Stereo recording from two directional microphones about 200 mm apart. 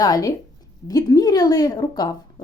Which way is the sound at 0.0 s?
20° left (ahead or behind).